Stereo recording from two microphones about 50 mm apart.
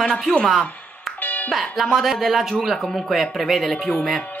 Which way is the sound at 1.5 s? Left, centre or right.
Centre.